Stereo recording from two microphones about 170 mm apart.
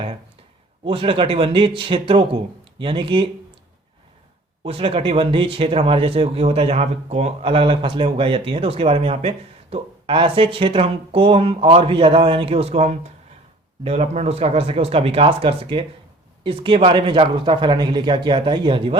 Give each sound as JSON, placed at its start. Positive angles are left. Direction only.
{"t": 0.9, "sound": "speech", "side_deg": -30}
{"t": 4.6, "sound": "speech", "side_deg": -35}